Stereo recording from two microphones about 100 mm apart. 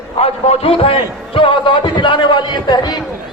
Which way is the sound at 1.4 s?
55° left (ahead or behind).